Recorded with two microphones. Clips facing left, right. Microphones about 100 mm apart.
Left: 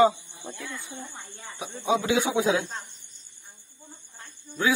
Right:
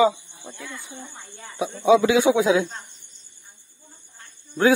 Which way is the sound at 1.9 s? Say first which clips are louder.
Right 8 dB; 90° right.